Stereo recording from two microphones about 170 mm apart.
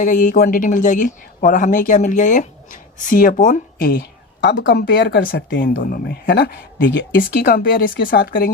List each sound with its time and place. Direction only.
0.0 s speech: 50° left (ahead or behind)
4.4 s speech: 80° left; by 8.4 s 60° left (ahead or behind)